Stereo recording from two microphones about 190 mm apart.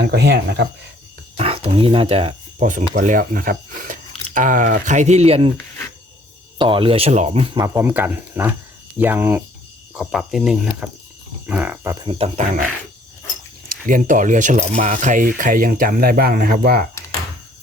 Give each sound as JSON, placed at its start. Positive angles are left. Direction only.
{"t": 0.0, "sound": "speech", "side_deg": -60}
{"t": 1.4, "sound": "speech", "side_deg": -30}
{"t": 6.6, "sound": "speech", "side_deg": -25}
{"t": 7.5, "sound": "speech", "side_deg": -15}
{"t": 12.0, "sound": "speech", "side_deg": -30}
{"t": 13.8, "sound": "speech", "side_deg": -45}